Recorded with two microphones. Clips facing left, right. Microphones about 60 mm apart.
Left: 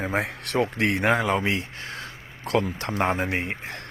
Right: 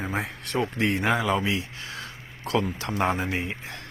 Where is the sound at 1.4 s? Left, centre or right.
Left.